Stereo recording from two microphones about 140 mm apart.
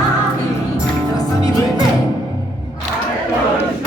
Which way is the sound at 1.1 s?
25° left (ahead or behind).